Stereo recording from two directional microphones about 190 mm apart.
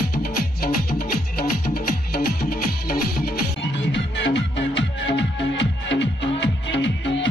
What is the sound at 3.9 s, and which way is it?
Music, 70° left (ahead or behind).